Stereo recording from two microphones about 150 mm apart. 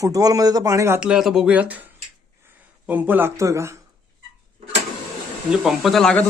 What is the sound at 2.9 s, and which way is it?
Speech, 10° right (ahead or behind).